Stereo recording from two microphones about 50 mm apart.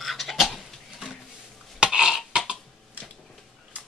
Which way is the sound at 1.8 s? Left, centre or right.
Centre.